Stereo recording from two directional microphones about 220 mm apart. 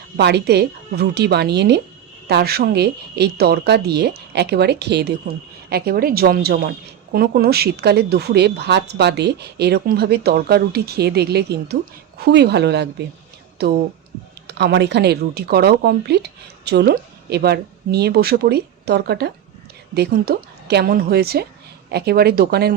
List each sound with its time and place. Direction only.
0.2 s a woman's voice: 50° right (ahead or behind)